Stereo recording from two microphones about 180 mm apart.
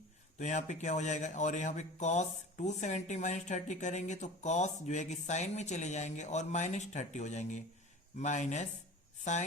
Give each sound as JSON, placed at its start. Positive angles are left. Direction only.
{"t": 0.3, "sound": "speech", "side_deg": 40}